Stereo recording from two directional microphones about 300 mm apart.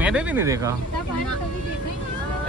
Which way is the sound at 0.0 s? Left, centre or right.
Centre.